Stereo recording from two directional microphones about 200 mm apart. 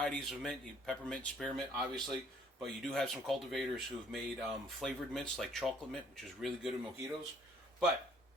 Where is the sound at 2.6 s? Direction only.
Centre (ahead or behind).